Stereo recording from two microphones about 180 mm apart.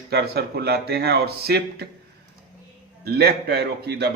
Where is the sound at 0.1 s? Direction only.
60° right (ahead or behind).